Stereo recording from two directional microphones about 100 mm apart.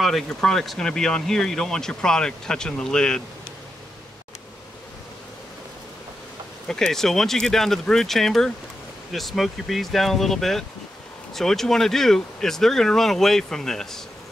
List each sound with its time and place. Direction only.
0.0 s speech: 5° left (ahead or behind)
6.7 s speech: 5° left (ahead or behind)